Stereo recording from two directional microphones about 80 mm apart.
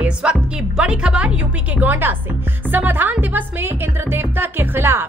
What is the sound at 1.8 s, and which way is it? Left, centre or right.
Speech, right.